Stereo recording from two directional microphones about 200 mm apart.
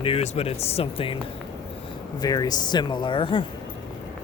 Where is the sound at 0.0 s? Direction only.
30° left (ahead or behind).